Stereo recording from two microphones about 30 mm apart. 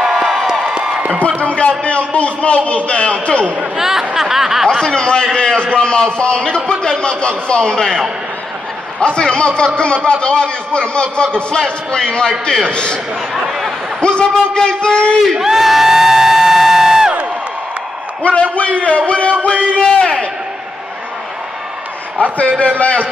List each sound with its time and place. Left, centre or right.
0.0 s a sound: centre
0.5 s music: right
1.2 s a man's voice: left
3.7 s speech: centre
4.1 s snicker: centre
4.7 s a man's voice: left
9.0 s a man's voice: left
13.5 s a sound: centre
14.0 s a sound: left
14.5 s a man's voice: left
15.3 s crowd: centre
18.2 s a man's voice: left
19.8 s a sound: left
22.6 s a man's voice: left